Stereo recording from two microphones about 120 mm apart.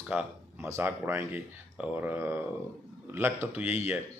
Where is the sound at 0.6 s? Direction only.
20° right (ahead or behind).